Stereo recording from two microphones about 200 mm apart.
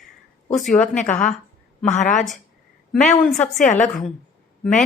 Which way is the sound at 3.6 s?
35° left (ahead or behind).